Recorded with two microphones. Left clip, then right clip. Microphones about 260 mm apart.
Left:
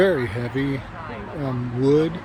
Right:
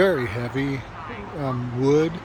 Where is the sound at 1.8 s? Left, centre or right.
Centre.